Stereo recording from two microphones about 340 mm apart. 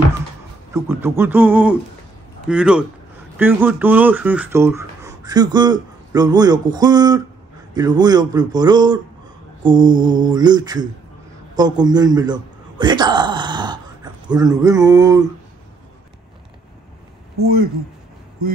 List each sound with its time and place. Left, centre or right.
0.8 s music: centre
3.3 s speech: centre
17.4 s speech: right